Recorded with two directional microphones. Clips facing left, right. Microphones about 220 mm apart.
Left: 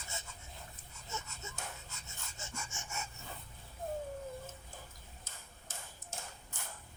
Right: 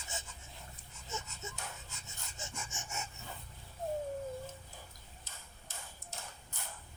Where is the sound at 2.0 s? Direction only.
15° right (ahead or behind).